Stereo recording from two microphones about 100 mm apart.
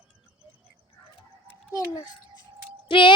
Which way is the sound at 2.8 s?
60° left (ahead or behind).